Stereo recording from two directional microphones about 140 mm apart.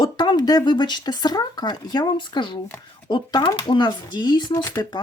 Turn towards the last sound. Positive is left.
turn(degrees=25)  # may be behind; listen again after turning